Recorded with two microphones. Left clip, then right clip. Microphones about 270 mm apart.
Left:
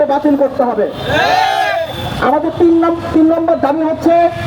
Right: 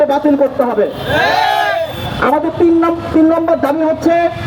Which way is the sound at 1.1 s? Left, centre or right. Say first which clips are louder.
Left 1 dB; centre.